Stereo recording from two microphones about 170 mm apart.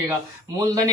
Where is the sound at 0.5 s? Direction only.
20° right (ahead or behind).